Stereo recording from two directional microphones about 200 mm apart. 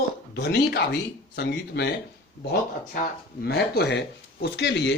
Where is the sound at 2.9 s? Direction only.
50° left (ahead or behind).